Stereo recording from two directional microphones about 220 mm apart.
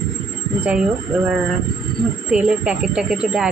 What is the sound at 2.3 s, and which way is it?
A woman's voice, 5° right (ahead or behind).